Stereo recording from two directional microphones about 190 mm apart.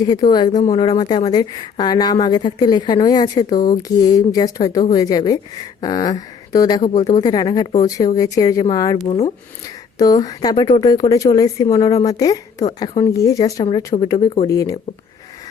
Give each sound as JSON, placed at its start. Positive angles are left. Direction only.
{"t": 0.3, "sound": "a woman's voice", "side_deg": 20}
{"t": 6.9, "sound": "speech", "side_deg": 35}
{"t": 7.2, "sound": "a woman's voice", "side_deg": 20}
{"t": 9.0, "sound": "speech", "side_deg": 35}
{"t": 10.0, "sound": "a woman's voice", "side_deg": 20}
{"t": 12.8, "sound": "speech", "side_deg": 30}
{"t": 13.1, "sound": "a woman's voice", "side_deg": 15}